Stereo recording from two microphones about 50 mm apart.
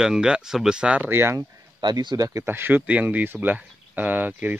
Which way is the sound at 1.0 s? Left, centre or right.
Right.